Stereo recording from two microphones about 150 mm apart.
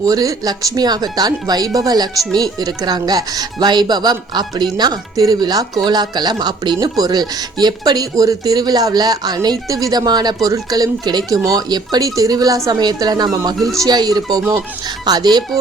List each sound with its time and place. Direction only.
0.0 s speech: 25° right (ahead or behind)